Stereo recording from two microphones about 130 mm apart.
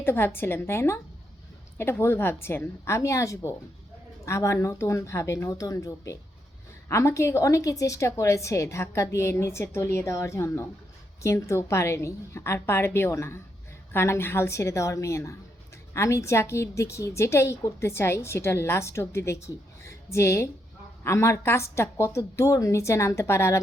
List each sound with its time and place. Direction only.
0.0 s a woman's voice: 20° left (ahead or behind)